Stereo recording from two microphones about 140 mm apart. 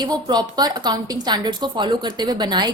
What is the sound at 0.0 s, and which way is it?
A woman's voice, 30° right (ahead or behind).